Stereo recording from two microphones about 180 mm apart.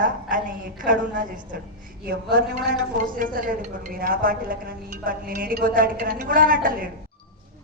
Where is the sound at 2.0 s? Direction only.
65° right (ahead or behind).